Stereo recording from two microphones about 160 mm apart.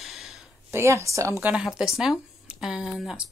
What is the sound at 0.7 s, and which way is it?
Speech, 15° right (ahead or behind).